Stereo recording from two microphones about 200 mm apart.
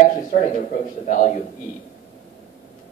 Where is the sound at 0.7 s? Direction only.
40° left (ahead or behind).